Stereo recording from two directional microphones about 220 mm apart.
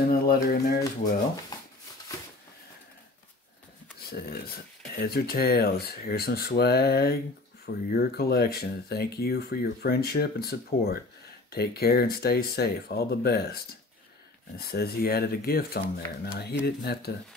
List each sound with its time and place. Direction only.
0.1 s speech: 45° left (ahead or behind)
4.1 s speech: 45° left (ahead or behind)
14.6 s speech: 45° left (ahead or behind)